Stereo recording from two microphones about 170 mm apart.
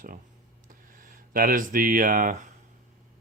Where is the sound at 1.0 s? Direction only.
55° right (ahead or behind).